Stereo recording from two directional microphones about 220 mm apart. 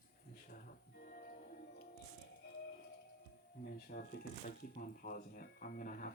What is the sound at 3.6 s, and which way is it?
Speech, 45° left (ahead or behind).